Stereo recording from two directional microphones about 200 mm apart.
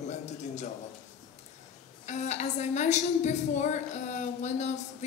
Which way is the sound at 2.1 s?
35° left (ahead or behind).